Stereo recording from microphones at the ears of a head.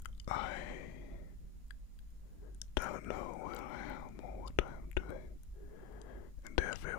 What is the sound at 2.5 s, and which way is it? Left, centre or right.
Whispering, left.